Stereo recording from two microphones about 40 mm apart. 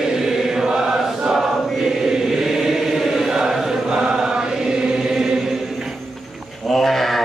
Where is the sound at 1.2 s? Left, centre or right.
Centre.